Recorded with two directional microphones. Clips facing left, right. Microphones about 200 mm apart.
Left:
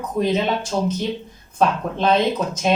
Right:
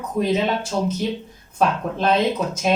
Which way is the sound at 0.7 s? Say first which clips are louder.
Left 2 dB; 10° left (ahead or behind).